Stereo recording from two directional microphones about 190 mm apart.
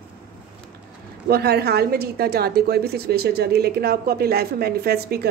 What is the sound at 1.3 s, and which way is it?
A woman's voice, 55° right (ahead or behind).